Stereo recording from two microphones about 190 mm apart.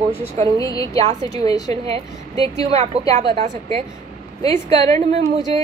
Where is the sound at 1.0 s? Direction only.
30° right (ahead or behind).